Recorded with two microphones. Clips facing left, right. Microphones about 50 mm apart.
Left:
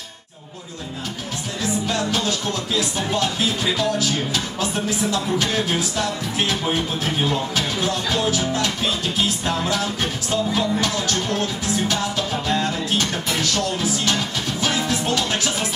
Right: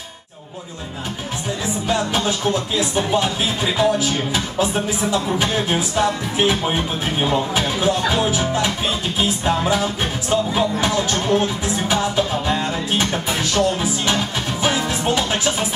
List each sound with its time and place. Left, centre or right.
1.9 s music: centre